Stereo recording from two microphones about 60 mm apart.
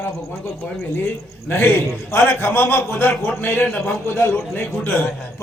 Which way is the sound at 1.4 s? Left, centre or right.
Left.